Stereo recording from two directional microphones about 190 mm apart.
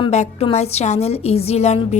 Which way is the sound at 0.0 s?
35° left (ahead or behind).